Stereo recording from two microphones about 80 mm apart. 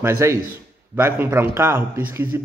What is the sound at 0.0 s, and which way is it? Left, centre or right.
A man's voice, right.